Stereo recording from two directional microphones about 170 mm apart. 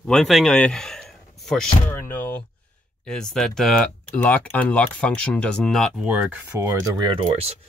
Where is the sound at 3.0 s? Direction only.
5° left (ahead or behind); by 7.2 s 25° right (ahead or behind).